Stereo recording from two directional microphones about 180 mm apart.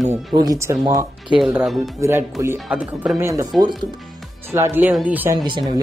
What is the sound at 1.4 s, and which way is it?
Speech, centre (ahead or behind).